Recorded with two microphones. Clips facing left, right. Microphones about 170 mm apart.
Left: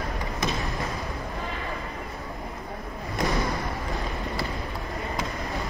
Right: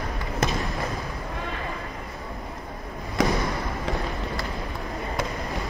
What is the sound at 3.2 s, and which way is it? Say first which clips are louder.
Basketball bounce: right 4 dB; 90° right.